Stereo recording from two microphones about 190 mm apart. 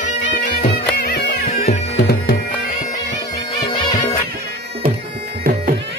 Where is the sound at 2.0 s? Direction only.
55° left (ahead or behind).